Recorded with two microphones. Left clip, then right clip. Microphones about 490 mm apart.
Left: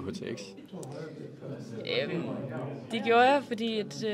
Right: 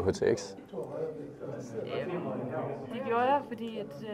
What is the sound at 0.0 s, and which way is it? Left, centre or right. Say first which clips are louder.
Speech: right 10 dB; right.